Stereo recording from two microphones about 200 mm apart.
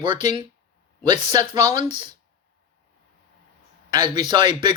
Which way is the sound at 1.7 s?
35° left (ahead or behind).